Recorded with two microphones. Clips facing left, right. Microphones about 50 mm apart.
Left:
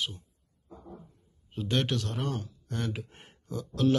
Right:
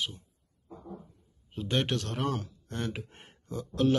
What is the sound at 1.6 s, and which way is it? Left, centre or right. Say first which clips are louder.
Speech: even; right.